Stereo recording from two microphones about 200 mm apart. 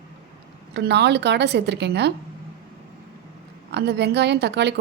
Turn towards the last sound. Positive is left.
turn(degrees=-60)  # may be behind; listen again after turning